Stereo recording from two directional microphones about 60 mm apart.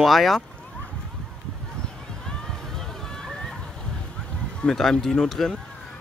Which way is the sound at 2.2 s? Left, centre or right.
Centre.